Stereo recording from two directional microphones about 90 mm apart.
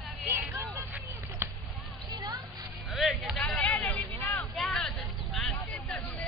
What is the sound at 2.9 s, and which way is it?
Music, centre (ahead or behind).